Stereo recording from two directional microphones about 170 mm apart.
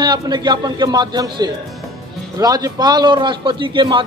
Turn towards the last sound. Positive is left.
turn(degrees=-25)  # may be behind; listen again after turning